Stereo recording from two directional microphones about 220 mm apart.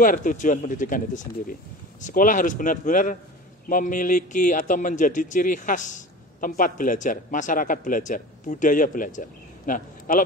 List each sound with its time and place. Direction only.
0.0 s a man's voice: 40° left (ahead or behind)